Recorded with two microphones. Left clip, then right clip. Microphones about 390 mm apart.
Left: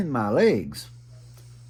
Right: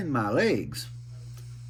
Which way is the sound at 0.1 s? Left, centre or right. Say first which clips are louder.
Left 4 dB; centre.